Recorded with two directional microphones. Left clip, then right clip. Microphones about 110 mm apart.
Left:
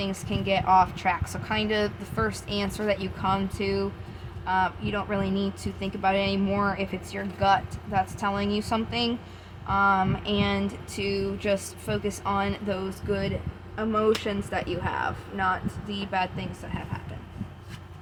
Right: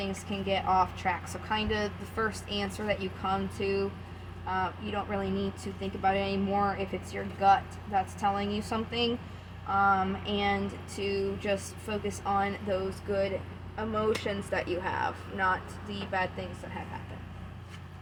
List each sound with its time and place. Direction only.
0.0 s speech: 65° left (ahead or behind)
9.7 s a sound: 75° left (ahead or behind)
13.9 s speech: 70° left (ahead or behind)